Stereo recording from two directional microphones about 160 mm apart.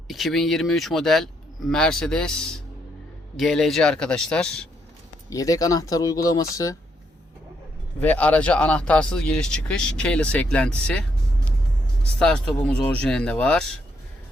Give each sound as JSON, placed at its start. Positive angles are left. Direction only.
{"t": 0.1, "sound": "speech", "side_deg": 0}
{"t": 5.3, "sound": "speech", "side_deg": 20}
{"t": 8.0, "sound": "speech", "side_deg": 10}
{"t": 12.2, "sound": "speech", "side_deg": 5}